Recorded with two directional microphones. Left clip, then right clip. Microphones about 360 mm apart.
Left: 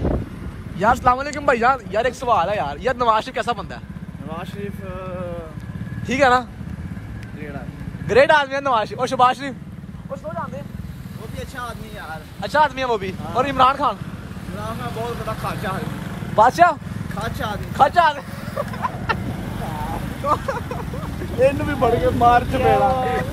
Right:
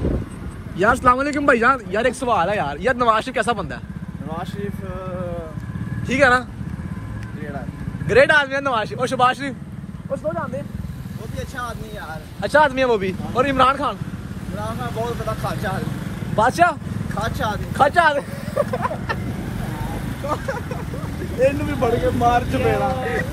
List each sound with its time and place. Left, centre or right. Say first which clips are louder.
0.7 s speech: right 1 dB; centre
6.0 s speech: even; centre
8.1 s speech: even; centre
14.6 s speech: right 2 dB; centre
16.3 s speech: left 3 dB; centre
17.1 s speech: right 3 dB; centre
17.7 s speech: even; centre
19.1 s vehicle: left 3 dB; left
20.2 s speech: left 4 dB; centre
21.4 s speech: left 1 dB; left